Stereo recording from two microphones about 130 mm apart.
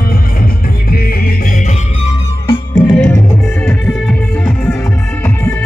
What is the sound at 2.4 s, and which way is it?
Music, 35° left (ahead or behind).